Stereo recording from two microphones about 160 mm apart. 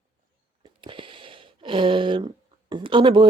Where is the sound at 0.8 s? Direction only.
30° right (ahead or behind).